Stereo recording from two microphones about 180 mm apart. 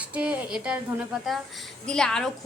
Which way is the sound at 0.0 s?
5° right (ahead or behind).